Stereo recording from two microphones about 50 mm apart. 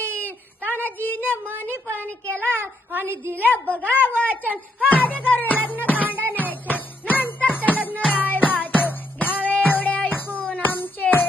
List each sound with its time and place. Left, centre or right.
0.0 s a sound: left
1.5 s a woman's voice: left
2.9 s a woman's voice: right
3.4 s a woman's voice: left
4.5 s speech: right
5.2 s a woman's voice: left
5.6 s music: left
5.9 s music: right
7.1 s music: left